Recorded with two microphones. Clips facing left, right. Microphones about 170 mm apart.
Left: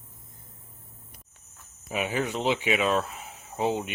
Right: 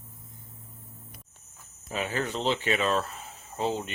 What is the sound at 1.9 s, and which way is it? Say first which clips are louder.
Speech: left 2 dB; 15° left (ahead or behind).